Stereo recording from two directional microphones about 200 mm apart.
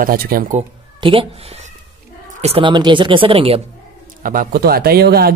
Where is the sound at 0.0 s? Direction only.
45° right (ahead or behind).